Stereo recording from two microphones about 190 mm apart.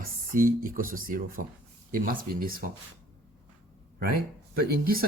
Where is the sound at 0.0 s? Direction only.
45° right (ahead or behind).